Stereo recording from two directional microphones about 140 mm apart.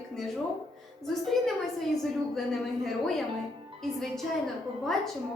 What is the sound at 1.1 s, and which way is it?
A woman's voice, centre (ahead or behind).